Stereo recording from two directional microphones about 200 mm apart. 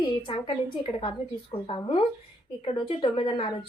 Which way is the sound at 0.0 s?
25° left (ahead or behind).